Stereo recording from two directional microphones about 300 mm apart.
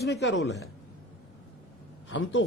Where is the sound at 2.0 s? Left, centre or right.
Left.